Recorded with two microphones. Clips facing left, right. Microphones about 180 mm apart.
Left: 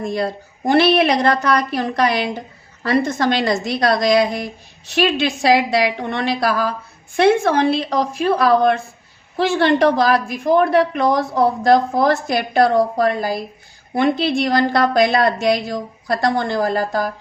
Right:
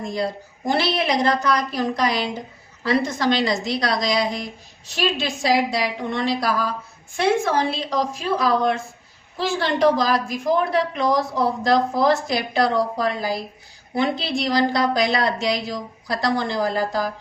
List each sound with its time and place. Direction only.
0.0 s a woman's voice: 60° left (ahead or behind)